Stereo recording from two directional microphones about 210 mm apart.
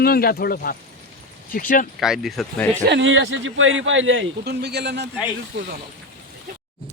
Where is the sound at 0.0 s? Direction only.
45° left (ahead or behind).